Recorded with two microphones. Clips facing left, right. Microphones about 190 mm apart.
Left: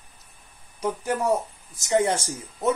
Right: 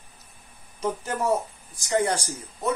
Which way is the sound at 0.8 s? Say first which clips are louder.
Left 2 dB; 10° left (ahead or behind).